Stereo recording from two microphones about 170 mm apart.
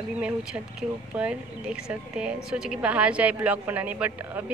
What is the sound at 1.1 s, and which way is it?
A woman's voice, 5° right (ahead or behind).